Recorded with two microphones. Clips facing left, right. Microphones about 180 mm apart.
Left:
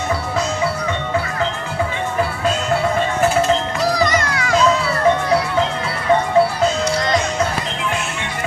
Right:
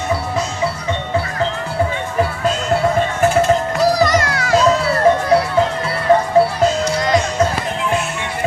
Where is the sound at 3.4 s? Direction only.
45° right (ahead or behind).